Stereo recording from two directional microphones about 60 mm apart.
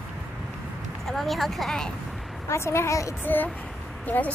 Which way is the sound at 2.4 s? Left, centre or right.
Left.